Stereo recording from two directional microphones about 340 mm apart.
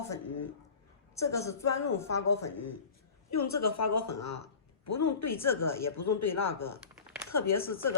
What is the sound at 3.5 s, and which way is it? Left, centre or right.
Speech, left.